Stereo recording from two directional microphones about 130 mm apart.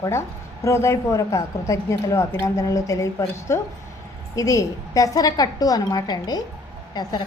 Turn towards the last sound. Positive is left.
turn(degrees=30)  # may be behind; listen again after turning